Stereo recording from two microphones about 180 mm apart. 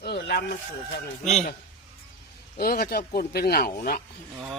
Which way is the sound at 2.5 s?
55° left (ahead or behind).